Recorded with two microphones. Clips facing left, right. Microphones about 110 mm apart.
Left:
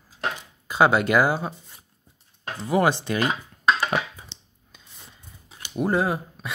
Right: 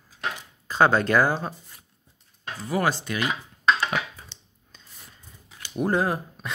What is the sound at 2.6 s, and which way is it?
Speech, 25° left (ahead or behind).